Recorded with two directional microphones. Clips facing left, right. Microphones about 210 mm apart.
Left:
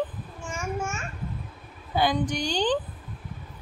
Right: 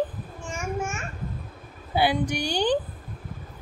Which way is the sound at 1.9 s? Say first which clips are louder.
Right 1 dB; 10° right (ahead or behind).